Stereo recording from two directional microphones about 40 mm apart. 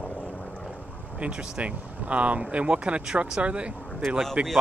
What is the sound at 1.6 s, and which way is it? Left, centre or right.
Speech, right.